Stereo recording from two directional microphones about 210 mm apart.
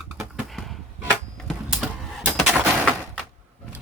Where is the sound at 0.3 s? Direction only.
Centre (ahead or behind).